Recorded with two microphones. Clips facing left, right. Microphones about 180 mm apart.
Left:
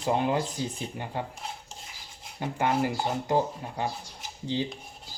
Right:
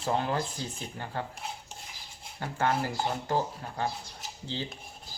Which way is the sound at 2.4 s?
15° left (ahead or behind).